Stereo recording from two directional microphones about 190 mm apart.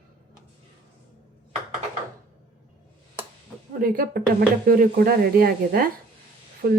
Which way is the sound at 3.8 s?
50° right (ahead or behind).